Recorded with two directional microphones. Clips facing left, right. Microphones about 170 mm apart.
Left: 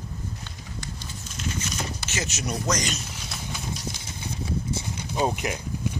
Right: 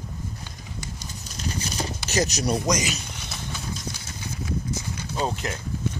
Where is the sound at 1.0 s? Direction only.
35° right (ahead or behind).